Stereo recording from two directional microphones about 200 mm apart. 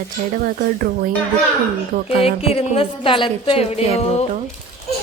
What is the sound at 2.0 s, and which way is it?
A woman's voice, 30° left (ahead or behind).